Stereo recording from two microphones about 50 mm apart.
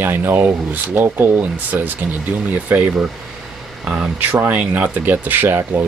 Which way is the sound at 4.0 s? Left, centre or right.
Right.